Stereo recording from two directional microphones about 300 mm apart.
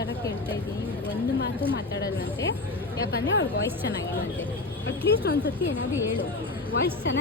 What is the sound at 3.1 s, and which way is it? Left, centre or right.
Speech, left.